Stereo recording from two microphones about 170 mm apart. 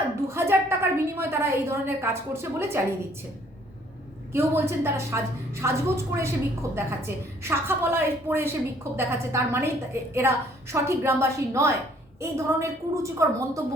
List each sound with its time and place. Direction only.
0.3 s a woman's voice: 15° right (ahead or behind)
4.3 s a woman's voice: 15° right (ahead or behind)